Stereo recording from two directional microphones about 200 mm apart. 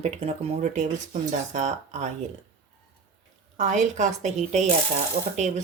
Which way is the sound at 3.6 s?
35° right (ahead or behind).